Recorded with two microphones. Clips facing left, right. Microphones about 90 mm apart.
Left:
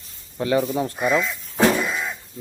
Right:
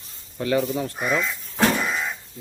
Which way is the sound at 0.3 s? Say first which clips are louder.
Left 2 dB; 25° left (ahead or behind).